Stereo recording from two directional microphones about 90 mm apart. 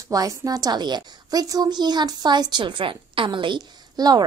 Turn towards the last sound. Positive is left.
turn(degrees=-50)  # may be behind; listen again after turning